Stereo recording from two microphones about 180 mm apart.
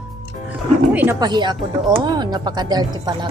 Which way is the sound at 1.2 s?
25° right (ahead or behind).